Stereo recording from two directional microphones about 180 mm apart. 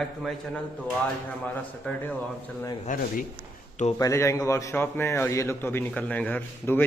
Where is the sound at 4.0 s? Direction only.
15° left (ahead or behind).